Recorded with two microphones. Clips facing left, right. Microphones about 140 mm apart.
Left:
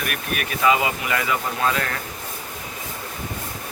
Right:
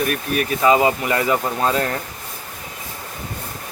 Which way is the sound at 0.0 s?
30° right (ahead or behind).